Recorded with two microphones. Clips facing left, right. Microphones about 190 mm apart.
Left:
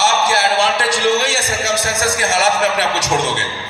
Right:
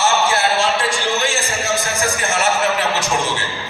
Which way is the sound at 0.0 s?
90° left.